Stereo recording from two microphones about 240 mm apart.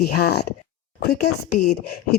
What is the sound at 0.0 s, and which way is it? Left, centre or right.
A woman's voice, left.